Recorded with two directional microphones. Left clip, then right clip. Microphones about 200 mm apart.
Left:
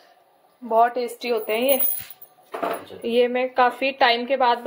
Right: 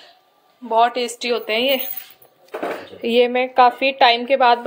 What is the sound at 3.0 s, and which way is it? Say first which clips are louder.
A woman's voice: right 4 dB; 20° right (ahead or behind).